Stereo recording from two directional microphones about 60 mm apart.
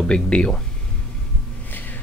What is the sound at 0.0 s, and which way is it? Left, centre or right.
Speech, centre.